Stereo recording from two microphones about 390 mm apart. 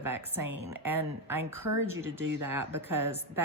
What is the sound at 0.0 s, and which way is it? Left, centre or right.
A woman's voice, centre.